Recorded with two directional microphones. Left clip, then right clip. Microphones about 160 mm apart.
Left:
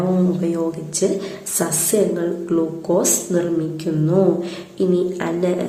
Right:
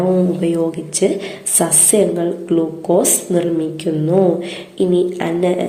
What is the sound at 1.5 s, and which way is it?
A woman's voice, 15° right (ahead or behind).